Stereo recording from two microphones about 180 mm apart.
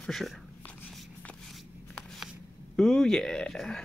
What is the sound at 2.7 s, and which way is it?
Speech, 5° left (ahead or behind).